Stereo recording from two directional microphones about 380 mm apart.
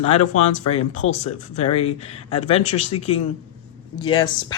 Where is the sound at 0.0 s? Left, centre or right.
Centre.